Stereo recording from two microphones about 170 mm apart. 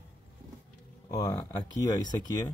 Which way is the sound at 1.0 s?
25° left (ahead or behind).